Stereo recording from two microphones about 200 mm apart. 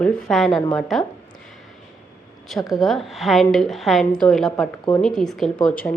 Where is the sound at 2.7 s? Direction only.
Centre (ahead or behind).